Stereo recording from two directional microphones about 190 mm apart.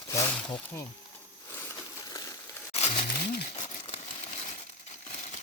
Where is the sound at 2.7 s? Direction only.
30° left (ahead or behind).